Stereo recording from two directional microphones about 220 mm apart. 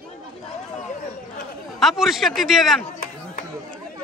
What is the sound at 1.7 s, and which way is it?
A man's voice, centre (ahead or behind).